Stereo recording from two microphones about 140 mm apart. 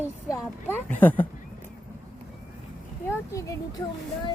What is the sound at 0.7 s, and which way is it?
Speech, 10° left (ahead or behind).